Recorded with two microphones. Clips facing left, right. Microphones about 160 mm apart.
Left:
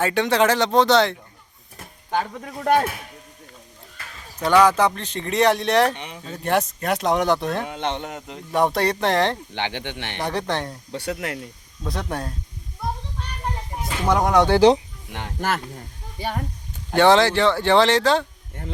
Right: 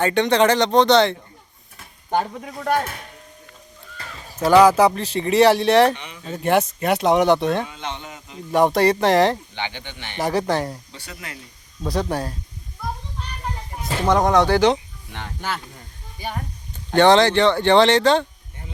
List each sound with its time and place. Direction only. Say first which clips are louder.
0.0 s speech: right 2 dB; 5° left (ahead or behind)
2.0 s speech: right 2 dB; 15° right (ahead or behind)
2.8 s speech: left 4 dB; 5° left (ahead or behind)
4.6 s speech: right 4 dB; 10° right (ahead or behind)
7.6 s speech: left 4 dB; 65° left (ahead or behind)
8.5 s speech: right 4 dB; centre (ahead or behind)
9.6 s speech: left 3 dB; 70° left (ahead or behind)
10.2 s speech: right 5 dB; 5° right (ahead or behind)
10.9 s speech: left 10 dB; 65° left (ahead or behind)
11.9 s speech: right 5 dB; centre (ahead or behind)
14.1 s speech: right 1 dB; 10° left (ahead or behind)
14.4 s speech: left 2 dB; 30° left (ahead or behind)
15.4 s speech: left 4 dB; 50° left (ahead or behind)
16.9 s speech: right 2 dB; 5° left (ahead or behind)